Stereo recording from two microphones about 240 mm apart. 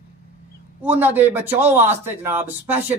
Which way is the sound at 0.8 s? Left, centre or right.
Centre.